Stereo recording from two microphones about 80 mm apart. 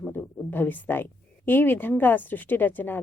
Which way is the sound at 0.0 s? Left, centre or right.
Left.